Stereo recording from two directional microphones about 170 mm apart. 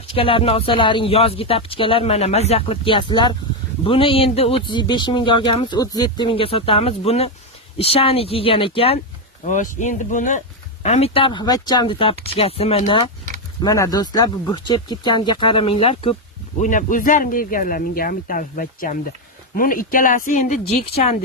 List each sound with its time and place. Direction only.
0.1 s speech: 30° left (ahead or behind)
9.4 s speech: 45° left (ahead or behind)
13.6 s speech: 20° left (ahead or behind)
16.6 s speech: 50° left (ahead or behind)